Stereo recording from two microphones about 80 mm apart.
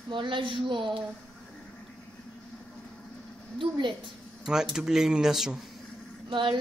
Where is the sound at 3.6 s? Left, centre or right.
Right.